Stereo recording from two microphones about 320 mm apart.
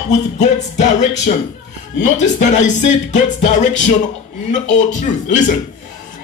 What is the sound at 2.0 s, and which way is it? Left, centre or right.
Speech, left.